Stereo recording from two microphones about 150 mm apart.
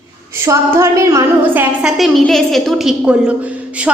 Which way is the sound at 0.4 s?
20° right (ahead or behind).